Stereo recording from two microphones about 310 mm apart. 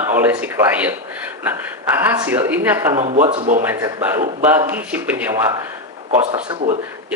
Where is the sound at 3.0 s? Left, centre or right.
Centre.